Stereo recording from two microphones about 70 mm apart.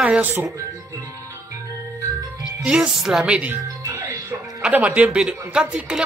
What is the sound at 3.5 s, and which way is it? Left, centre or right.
Music, right.